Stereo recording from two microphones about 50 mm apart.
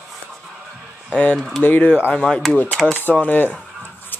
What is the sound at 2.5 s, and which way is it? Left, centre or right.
Speech, left.